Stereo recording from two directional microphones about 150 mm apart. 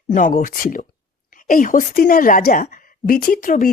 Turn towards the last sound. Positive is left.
turn(degrees=65)  # may be behind; listen again after turning